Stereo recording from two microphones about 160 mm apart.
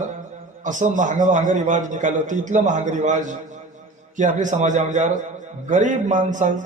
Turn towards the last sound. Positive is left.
turn(degrees=-50)  # may be behind; listen again after turning